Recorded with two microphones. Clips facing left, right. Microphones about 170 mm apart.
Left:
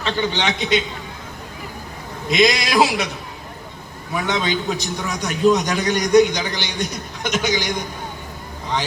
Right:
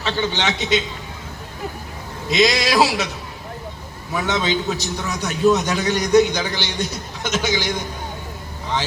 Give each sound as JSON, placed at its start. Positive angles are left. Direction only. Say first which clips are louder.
{"t": 0.0, "sound": "a man's voice", "louder": "left 1 dB", "side_deg": 15}
{"t": 2.3, "sound": "a man's voice", "louder": "even", "side_deg": 15}
{"t": 4.1, "sound": "a man's voice", "louder": "right 1 dB", "side_deg": 15}